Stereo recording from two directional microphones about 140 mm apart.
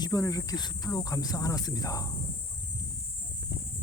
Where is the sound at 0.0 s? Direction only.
25° left (ahead or behind).